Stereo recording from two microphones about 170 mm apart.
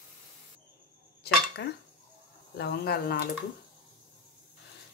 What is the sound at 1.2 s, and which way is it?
Dishes, 75° left (ahead or behind).